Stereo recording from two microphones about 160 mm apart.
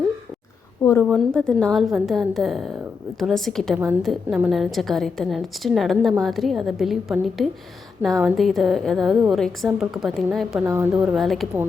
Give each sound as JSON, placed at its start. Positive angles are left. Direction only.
{"t": 0.8, "sound": "a sound", "side_deg": 15}
{"t": 1.3, "sound": "a woman's voice", "side_deg": 5}
{"t": 10.7, "sound": "speech", "side_deg": -15}
{"t": 11.0, "sound": "a woman's voice", "side_deg": 0}